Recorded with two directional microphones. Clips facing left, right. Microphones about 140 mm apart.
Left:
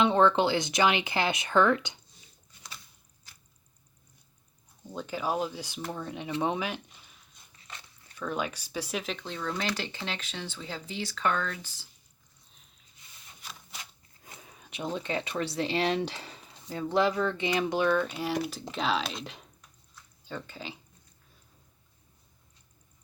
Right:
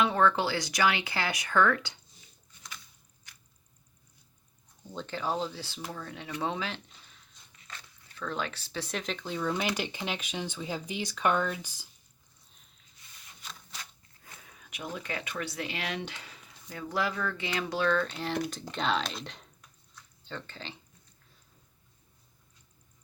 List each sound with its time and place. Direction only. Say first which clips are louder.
0.0 s speech: left 3 dB; 25° left (ahead or behind)
4.9 s speech: left 2 dB; 10° left (ahead or behind)
8.2 s speech: left 2 dB; 10° left (ahead or behind); by 11.9 s 15° right (ahead or behind)
13.4 s a sound: even; 10° left (ahead or behind)
14.3 s speech: left 3 dB; 20° left (ahead or behind)